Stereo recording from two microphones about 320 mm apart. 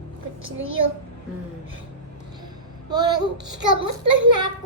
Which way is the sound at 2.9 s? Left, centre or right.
Centre.